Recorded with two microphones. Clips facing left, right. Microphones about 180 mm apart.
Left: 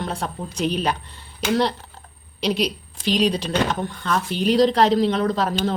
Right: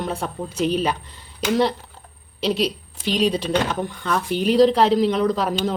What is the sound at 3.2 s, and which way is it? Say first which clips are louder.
A woman's voice: right 1 dB; 5° right (ahead or behind).